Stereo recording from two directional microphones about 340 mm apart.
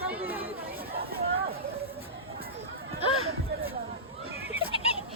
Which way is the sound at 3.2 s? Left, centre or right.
Right.